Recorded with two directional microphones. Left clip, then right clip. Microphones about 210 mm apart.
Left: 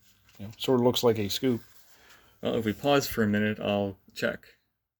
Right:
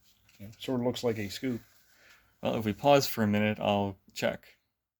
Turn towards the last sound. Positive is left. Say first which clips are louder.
# left 1 dB
turn(degrees=-30)  # may be behind; listen again after turning